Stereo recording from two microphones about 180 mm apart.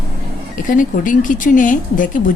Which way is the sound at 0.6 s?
45° left (ahead or behind).